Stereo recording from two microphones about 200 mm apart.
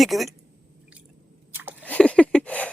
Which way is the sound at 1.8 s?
5° left (ahead or behind).